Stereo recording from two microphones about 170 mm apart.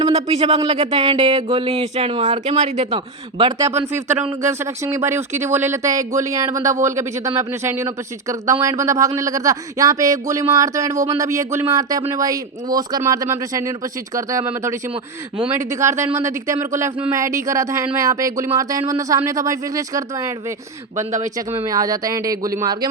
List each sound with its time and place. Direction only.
0.0 s speech: 40° right (ahead or behind)
2.9 s speech: 30° right (ahead or behind)
4.1 s speech: 40° right (ahead or behind)
4.4 s speech: 15° right (ahead or behind)
21.3 s speech: 20° right (ahead or behind)